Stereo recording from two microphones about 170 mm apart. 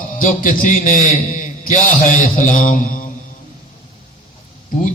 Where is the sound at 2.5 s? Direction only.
50° left (ahead or behind).